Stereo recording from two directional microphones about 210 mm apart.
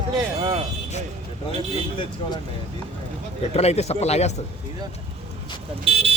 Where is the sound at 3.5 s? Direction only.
30° left (ahead or behind).